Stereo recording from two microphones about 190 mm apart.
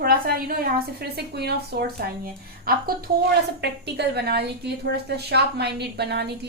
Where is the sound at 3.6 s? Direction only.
60° right (ahead or behind).